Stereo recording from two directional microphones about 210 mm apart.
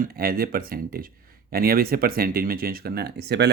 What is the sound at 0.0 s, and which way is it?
Speech, 45° right (ahead or behind).